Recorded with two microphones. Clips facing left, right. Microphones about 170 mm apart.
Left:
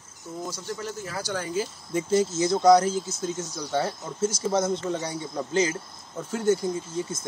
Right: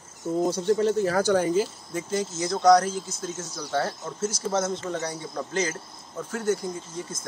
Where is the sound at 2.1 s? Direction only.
30° left (ahead or behind).